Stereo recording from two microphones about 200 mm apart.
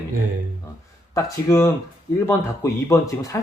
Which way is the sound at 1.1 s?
15° left (ahead or behind).